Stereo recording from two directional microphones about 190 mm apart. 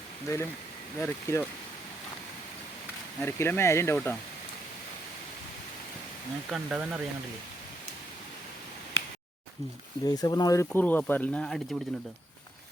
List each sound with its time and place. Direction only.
0.9 s speech: 15° left (ahead or behind)
3.2 s speech: 15° left (ahead or behind)
6.5 s speech: 5° right (ahead or behind)
8.9 s a sound: 90° left
10.0 s speech: 20° left (ahead or behind); by 11.8 s 5° left (ahead or behind)